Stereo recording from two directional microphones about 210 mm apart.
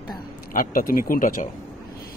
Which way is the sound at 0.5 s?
40° left (ahead or behind).